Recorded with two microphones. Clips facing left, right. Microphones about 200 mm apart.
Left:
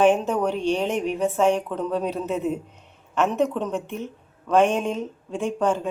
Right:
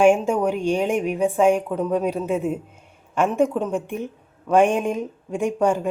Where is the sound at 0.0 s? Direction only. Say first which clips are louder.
Right 2 dB; 10° right (ahead or behind).